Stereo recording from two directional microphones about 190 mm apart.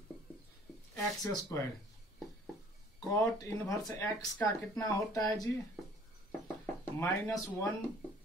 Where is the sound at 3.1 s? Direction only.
15° left (ahead or behind).